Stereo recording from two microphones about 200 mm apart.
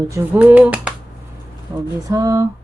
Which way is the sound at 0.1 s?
10° right (ahead or behind).